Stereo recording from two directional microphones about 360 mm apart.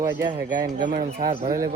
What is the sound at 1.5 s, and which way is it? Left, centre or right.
Speech, centre.